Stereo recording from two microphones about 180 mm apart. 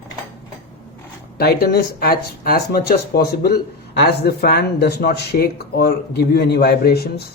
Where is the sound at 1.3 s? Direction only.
65° left (ahead or behind).